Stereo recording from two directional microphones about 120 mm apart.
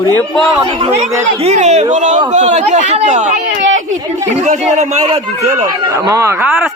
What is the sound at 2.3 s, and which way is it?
Speech, 75° right (ahead or behind).